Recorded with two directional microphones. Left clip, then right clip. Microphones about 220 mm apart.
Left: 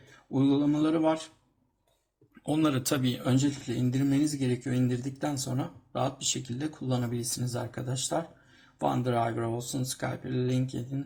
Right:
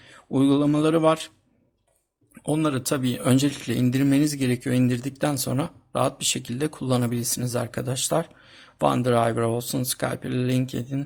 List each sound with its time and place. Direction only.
0.3 s speech: 35° right (ahead or behind)
2.4 s speech: 25° right (ahead or behind)